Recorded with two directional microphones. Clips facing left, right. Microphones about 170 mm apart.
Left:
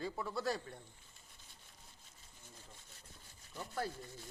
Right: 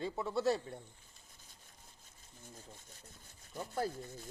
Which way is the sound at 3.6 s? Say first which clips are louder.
Right 4 dB; 25° right (ahead or behind).